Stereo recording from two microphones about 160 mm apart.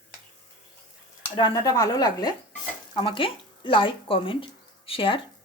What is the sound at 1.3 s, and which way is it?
Speech, 25° left (ahead or behind).